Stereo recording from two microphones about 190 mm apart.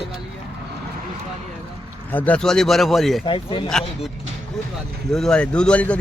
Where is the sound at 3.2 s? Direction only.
25° left (ahead or behind).